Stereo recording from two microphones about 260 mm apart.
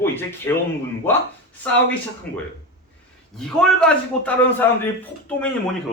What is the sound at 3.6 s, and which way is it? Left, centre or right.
A man's voice, centre.